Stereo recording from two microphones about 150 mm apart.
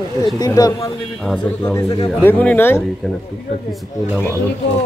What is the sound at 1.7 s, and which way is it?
Speech, 25° left (ahead or behind).